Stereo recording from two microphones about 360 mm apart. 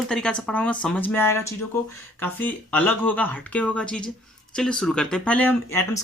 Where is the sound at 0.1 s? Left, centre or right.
Centre.